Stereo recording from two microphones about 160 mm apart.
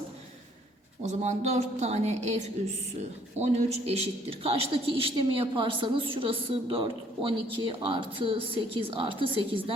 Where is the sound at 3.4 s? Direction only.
45° right (ahead or behind).